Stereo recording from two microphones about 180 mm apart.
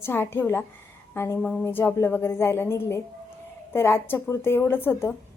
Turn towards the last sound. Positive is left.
turn(degrees=10)  # may be behind; listen again after turning